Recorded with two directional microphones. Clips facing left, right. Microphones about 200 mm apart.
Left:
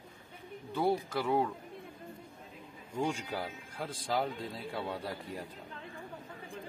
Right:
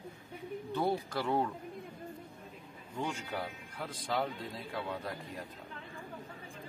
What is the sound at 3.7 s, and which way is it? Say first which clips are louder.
Speech: left 2 dB; 30° left (ahead or behind).